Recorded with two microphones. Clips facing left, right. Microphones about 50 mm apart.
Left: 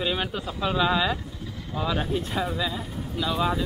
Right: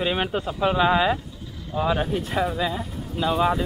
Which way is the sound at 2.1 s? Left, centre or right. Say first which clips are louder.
Right 3 dB; right.